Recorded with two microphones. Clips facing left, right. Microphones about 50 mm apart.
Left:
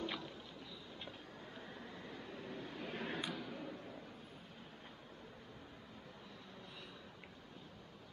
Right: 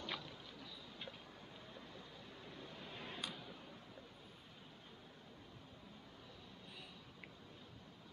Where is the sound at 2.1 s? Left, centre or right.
Left.